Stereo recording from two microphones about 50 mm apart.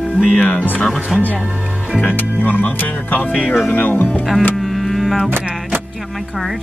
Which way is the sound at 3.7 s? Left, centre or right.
Left.